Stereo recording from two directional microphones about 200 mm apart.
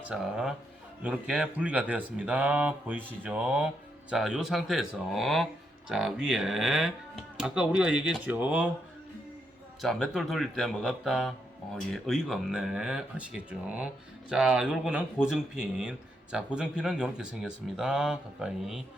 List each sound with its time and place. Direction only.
0.0 s speech: 5° right (ahead or behind)
9.8 s speech: centre (ahead or behind)